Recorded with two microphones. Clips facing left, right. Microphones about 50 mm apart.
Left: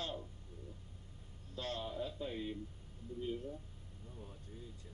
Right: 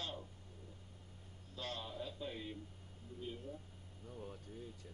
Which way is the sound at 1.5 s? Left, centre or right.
Left.